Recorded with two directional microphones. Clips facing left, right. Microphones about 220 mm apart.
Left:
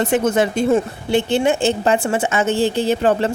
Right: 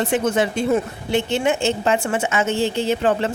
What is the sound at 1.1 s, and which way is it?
A woman's voice, 30° left (ahead or behind).